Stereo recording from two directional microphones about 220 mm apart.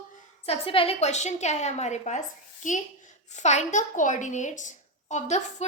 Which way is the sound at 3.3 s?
30° left (ahead or behind).